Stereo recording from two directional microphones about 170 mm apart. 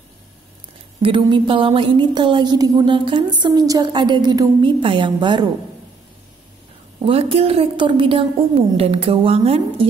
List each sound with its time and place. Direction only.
1.0 s speech: 30° right (ahead or behind)
7.0 s a woman's voice: 35° right (ahead or behind)